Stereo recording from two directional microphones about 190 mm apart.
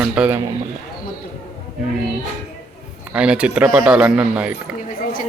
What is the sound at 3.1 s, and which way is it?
Speech, 5° right (ahead or behind).